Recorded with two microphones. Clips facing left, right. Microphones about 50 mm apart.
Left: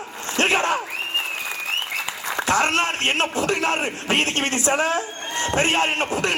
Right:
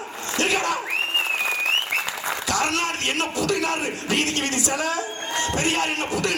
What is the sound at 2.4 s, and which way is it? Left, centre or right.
A man's voice, left.